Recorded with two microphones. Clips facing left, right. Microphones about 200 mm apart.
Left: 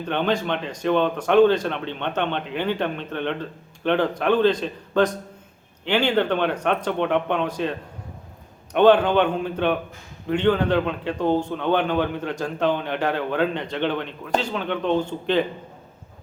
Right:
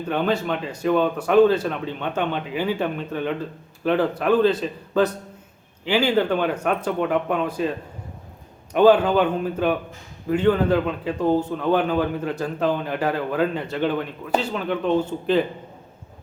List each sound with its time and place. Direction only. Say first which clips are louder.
0.0 s a man's voice: right 1 dB; 5° right (ahead or behind)